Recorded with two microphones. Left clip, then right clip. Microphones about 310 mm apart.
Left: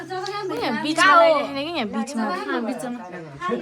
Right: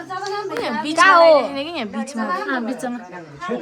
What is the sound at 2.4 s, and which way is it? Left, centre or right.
Speech, right.